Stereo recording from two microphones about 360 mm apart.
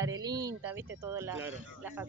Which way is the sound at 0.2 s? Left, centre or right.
Centre.